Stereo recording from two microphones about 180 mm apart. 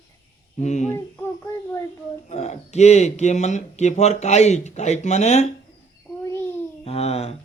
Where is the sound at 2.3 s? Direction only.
40° left (ahead or behind).